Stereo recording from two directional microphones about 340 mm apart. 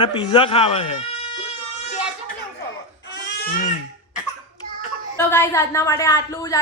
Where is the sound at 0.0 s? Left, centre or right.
Centre.